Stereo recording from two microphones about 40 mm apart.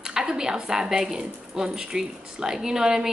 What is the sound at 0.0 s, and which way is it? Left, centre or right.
A woman's voice, centre.